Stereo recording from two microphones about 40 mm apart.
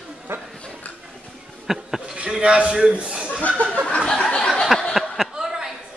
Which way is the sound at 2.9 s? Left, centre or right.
Right.